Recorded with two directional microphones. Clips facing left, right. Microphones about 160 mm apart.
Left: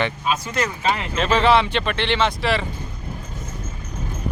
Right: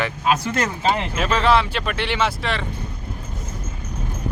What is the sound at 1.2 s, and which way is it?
Speech, centre (ahead or behind).